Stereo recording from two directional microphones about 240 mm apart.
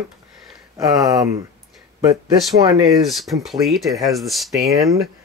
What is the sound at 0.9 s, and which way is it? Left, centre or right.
Speech, centre.